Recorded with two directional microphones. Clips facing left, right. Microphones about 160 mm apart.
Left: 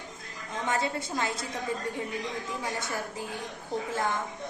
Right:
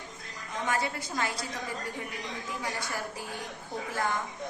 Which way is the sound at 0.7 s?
25° left (ahead or behind).